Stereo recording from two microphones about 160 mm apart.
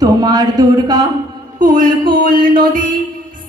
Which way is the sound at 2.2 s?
60° right (ahead or behind).